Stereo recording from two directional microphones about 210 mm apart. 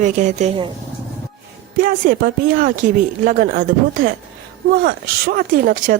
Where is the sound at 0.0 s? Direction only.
35° right (ahead or behind).